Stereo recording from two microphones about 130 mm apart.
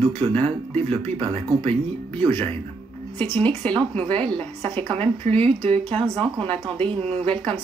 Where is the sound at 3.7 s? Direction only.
40° right (ahead or behind).